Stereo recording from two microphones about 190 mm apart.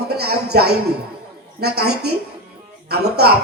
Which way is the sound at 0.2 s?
55° right (ahead or behind).